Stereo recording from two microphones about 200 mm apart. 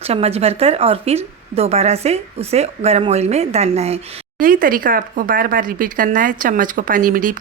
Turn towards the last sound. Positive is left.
turn(degrees=-45)  # may be behind; listen again after turning